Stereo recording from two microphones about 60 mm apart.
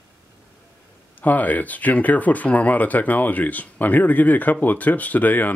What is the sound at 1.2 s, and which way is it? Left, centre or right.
Speech, left.